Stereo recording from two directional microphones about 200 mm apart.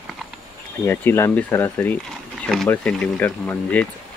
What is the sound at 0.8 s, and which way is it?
Speech, 10° left (ahead or behind).